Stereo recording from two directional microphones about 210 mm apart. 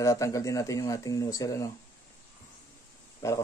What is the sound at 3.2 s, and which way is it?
Speech, 15° left (ahead or behind).